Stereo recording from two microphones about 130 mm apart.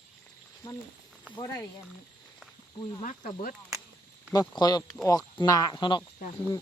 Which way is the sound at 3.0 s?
75° left (ahead or behind).